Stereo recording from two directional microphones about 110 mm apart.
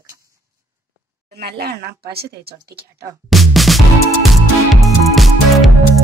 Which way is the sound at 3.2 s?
Centre (ahead or behind).